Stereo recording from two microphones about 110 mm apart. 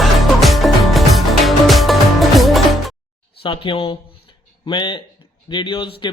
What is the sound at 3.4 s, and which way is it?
Speech, 50° left (ahead or behind).